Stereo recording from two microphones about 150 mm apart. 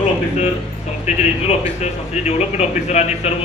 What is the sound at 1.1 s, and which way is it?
Speech, 50° left (ahead or behind).